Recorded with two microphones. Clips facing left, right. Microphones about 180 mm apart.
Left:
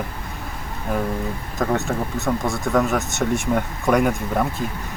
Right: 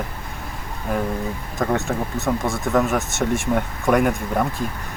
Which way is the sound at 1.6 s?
Centre (ahead or behind).